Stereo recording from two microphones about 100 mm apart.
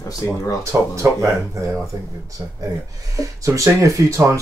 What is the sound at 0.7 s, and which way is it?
Speech, 30° right (ahead or behind).